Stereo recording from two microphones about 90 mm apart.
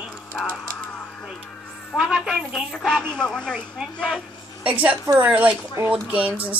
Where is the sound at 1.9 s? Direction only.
Centre (ahead or behind).